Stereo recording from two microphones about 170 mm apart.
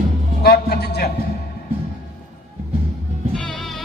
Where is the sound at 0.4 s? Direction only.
65° left (ahead or behind).